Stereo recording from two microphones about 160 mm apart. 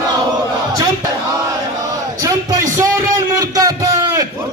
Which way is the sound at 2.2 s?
20° right (ahead or behind).